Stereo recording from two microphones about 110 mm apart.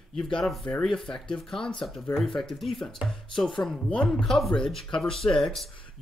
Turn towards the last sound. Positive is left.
turn(degrees=5)  # may be behind; listen again after turning